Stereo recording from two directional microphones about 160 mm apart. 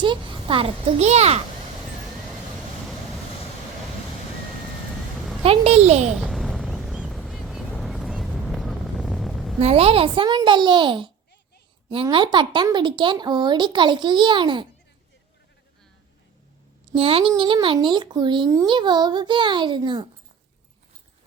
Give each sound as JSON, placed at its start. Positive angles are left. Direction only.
{"t": 0.0, "sound": "a child's voice", "side_deg": -30}
{"t": 5.4, "sound": "a child's voice", "side_deg": -40}
{"t": 6.1, "sound": "a sound", "side_deg": 0}
{"t": 7.7, "sound": "vehicle", "side_deg": 5}
{"t": 9.6, "sound": "a child's voice", "side_deg": -40}
{"t": 16.9, "sound": "speech", "side_deg": -35}